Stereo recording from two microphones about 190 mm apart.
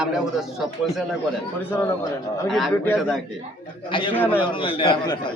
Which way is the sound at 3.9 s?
25° left (ahead or behind).